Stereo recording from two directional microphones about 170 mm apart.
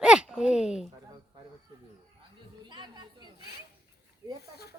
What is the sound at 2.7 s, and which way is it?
Speech, 25° right (ahead or behind).